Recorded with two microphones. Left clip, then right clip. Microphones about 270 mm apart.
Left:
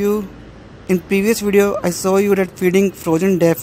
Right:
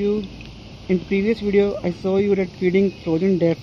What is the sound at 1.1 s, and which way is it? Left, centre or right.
Speech, left.